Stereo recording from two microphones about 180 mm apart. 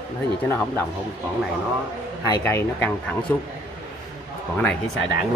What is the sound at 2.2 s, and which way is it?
Speech, 20° left (ahead or behind).